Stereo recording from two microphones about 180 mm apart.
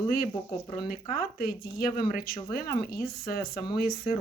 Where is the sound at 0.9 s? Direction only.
45° left (ahead or behind).